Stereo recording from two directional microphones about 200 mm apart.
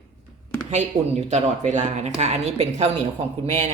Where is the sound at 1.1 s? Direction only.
35° right (ahead or behind).